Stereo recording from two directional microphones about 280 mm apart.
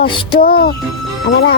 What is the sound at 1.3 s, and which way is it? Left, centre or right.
Speech, left.